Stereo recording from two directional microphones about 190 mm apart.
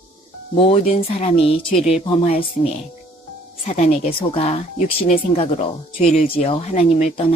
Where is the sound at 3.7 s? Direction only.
35° left (ahead or behind).